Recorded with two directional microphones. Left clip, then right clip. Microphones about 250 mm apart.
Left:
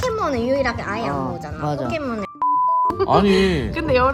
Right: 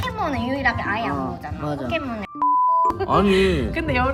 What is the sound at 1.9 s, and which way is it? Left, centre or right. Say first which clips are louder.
Speech: left 1 dB; centre.